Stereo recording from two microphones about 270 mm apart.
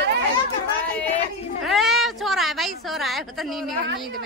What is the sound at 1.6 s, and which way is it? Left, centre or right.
A woman's voice, centre.